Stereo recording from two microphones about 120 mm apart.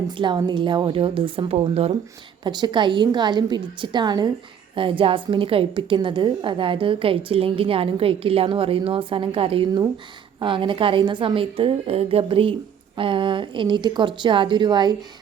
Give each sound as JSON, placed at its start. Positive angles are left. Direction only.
{"t": 0.1, "sound": "a woman's voice", "side_deg": -40}
{"t": 2.4, "sound": "a woman's voice", "side_deg": -35}